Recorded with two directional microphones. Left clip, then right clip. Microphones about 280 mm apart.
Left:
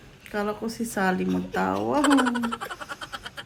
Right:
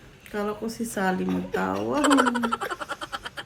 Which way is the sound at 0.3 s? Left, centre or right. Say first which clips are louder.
Left 1 dB; centre.